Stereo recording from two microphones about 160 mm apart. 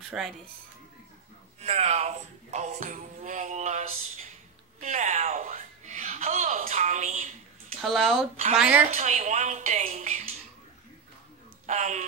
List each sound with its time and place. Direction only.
0.1 s a woman's voice: 10° right (ahead or behind)
1.6 s speech: 40° right (ahead or behind)
7.8 s a woman's voice: centre (ahead or behind)
8.9 s speech: 45° right (ahead or behind)
11.6 s speech: 45° right (ahead or behind)